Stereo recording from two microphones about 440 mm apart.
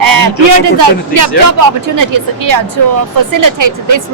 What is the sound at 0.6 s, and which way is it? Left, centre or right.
Speech, right.